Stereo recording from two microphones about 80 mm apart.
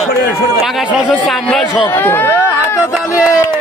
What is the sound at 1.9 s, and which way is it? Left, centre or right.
Speech, left.